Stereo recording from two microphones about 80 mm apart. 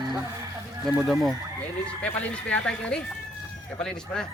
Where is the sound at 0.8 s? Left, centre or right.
Centre.